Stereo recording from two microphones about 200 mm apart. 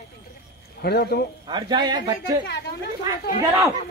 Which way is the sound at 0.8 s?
50° left (ahead or behind).